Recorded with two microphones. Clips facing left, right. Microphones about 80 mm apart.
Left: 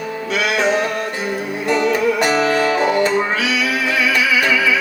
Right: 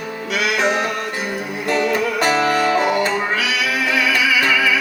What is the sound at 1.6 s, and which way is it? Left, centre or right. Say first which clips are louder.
Music: left 3 dB; left.